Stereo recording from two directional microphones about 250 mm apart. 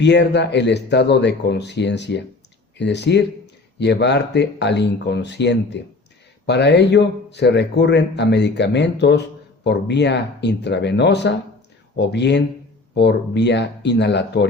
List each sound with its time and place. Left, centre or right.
0.0 s speech: left